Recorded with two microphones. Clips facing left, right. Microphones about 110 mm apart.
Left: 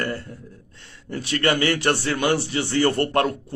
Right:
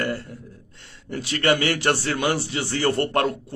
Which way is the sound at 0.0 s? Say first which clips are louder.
Right 1 dB; 20° right (ahead or behind).